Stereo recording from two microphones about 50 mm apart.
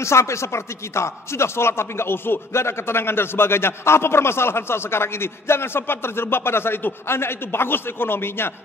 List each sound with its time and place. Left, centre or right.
0.0 s speech: left